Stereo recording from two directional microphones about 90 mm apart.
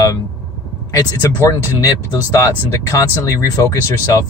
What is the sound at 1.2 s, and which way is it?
Speech, 35° left (ahead or behind).